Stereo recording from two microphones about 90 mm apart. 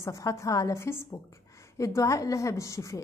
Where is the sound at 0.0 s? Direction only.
35° left (ahead or behind).